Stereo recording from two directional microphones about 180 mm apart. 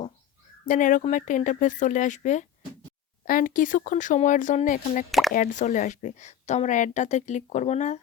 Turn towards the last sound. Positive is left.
turn(degrees=40)  # may be behind; listen again after turning